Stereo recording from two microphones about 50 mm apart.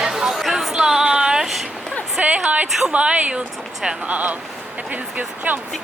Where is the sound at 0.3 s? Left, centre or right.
Centre.